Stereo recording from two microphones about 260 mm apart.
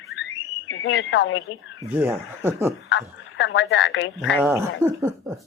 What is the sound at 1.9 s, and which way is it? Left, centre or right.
Speech, centre.